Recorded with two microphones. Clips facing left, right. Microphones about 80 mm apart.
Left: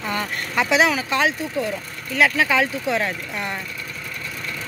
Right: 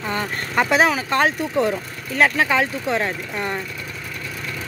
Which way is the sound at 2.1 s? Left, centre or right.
Right.